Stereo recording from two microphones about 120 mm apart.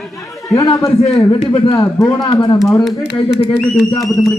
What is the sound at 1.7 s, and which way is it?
Speech, 30° left (ahead or behind).